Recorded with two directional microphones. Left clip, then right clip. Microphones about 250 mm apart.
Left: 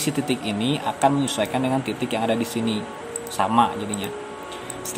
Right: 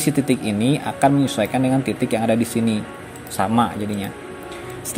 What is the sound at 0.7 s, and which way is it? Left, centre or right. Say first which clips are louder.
A man's voice: right 2 dB; centre.